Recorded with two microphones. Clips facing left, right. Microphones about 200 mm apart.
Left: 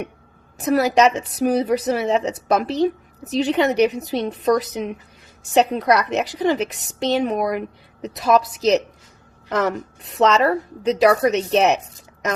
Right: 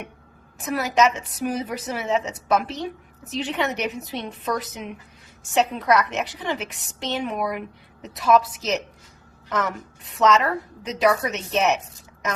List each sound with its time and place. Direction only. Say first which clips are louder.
0.6 s a woman's voice: left 5 dB; 35° left (ahead or behind)